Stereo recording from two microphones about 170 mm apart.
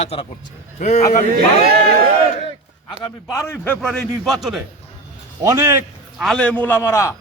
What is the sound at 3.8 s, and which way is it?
Speech, centre (ahead or behind).